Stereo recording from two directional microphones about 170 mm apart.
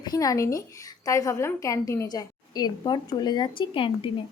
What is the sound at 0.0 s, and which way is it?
A woman's voice, 20° left (ahead or behind).